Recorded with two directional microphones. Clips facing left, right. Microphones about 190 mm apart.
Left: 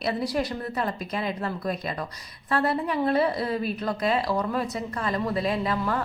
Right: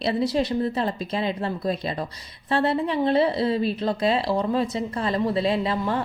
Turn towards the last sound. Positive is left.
turn(degrees=-25)  # may be behind; listen again after turning